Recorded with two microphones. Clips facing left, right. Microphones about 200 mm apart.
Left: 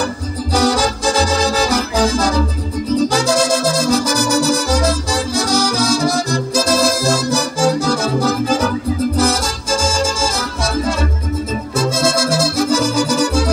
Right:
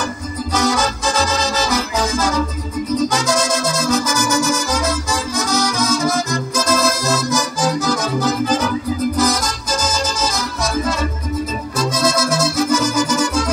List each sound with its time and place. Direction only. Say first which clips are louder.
0.6 s music: left 3 dB; 35° left (ahead or behind)
11.8 s music: left 1 dB; 30° left (ahead or behind)